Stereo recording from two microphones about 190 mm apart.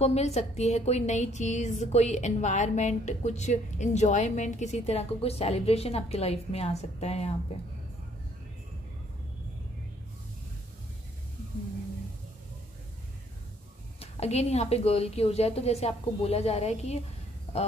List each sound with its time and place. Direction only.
0.0 s a woman's voice: 35° left (ahead or behind)
14.2 s a woman's voice: 35° left (ahead or behind)